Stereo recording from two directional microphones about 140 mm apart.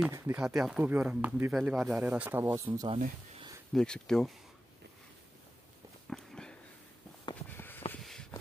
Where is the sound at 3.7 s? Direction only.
5° left (ahead or behind).